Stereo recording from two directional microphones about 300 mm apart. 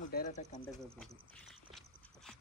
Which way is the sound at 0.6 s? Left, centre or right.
Centre.